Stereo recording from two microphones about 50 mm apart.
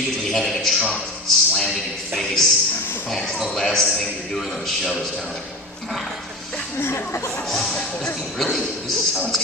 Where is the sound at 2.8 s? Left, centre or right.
Left.